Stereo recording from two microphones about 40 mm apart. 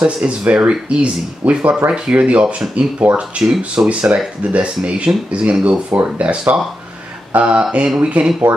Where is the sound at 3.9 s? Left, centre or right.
Right.